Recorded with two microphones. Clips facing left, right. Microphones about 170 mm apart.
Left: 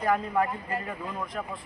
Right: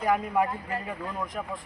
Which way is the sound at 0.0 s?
10° right (ahead or behind).